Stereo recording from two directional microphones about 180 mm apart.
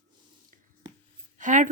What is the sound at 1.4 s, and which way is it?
Speech, 45° right (ahead or behind).